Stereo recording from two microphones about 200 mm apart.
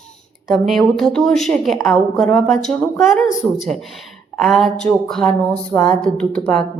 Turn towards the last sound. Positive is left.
turn(degrees=5)  # may be behind; listen again after turning